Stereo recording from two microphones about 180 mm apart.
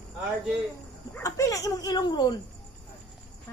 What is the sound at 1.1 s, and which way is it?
Speech, 15° left (ahead or behind).